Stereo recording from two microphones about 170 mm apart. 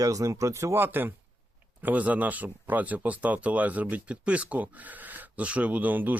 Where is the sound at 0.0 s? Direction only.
20° right (ahead or behind).